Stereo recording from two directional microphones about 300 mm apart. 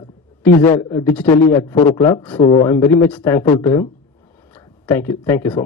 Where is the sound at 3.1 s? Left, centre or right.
Centre.